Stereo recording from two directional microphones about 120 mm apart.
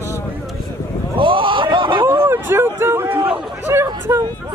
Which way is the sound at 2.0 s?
20° right (ahead or behind).